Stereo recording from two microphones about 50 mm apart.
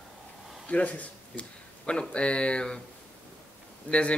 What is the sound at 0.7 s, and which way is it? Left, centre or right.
Speech, left.